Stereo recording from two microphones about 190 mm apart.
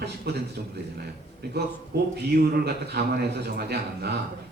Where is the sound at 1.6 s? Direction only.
55° right (ahead or behind).